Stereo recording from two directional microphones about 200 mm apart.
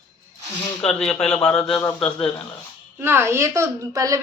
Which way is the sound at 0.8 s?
5° left (ahead or behind).